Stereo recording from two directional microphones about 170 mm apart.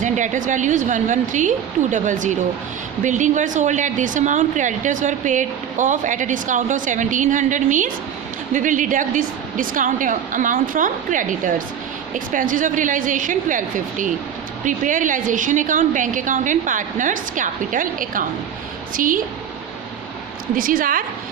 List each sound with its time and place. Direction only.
0.0 s a woman's voice: 50° right (ahead or behind)
20.6 s a woman's voice: 55° right (ahead or behind)